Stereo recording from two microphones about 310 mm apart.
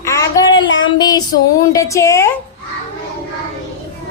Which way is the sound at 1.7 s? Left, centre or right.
Centre.